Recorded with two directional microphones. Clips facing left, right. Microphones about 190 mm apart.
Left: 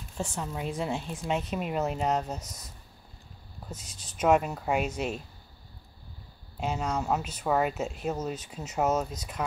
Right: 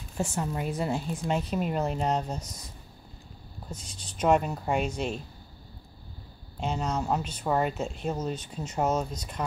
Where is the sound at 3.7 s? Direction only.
5° left (ahead or behind).